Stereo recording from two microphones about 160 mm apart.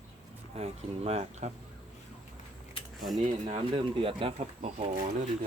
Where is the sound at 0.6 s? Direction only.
40° right (ahead or behind).